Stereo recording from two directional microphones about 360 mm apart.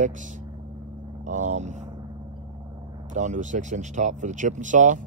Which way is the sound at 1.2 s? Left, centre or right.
Centre.